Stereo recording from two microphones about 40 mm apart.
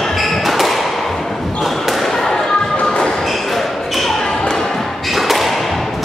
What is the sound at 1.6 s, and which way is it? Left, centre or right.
Basketball bounce, centre.